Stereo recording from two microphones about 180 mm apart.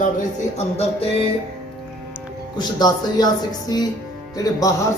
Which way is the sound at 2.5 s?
25° left (ahead or behind).